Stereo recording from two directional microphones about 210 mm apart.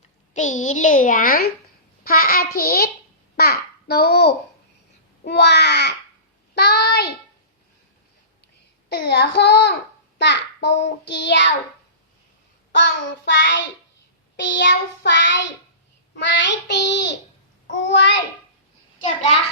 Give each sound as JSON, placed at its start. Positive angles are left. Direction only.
{"t": 0.3, "sound": "a child's voice", "side_deg": 35}
{"t": 2.0, "sound": "child singing", "side_deg": 45}
{"t": 3.3, "sound": "a child's voice", "side_deg": 50}
{"t": 5.2, "sound": "child singing", "side_deg": 50}
{"t": 8.9, "sound": "child singing", "side_deg": 50}
{"t": 12.7, "sound": "child singing", "side_deg": 55}
{"t": 18.9, "sound": "a child's voice", "side_deg": 35}